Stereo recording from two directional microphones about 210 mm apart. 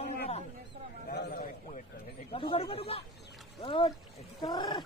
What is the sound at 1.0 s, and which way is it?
Speech, 40° left (ahead or behind).